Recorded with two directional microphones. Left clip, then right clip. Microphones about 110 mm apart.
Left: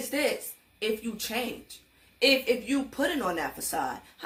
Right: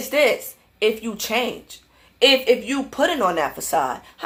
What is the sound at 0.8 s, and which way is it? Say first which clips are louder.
Speech: right 10 dB; 20° right (ahead or behind).